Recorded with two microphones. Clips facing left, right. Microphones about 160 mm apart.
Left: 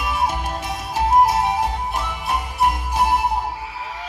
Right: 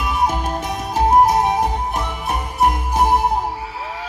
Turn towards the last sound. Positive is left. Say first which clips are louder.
# right 3 dB
turn(degrees=-45)  # may be behind; listen again after turning